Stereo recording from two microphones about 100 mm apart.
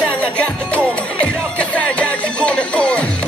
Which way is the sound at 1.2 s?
10° left (ahead or behind).